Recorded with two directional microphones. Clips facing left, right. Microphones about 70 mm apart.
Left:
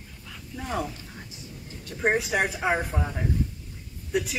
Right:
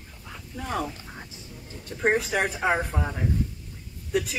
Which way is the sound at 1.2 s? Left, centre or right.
Right.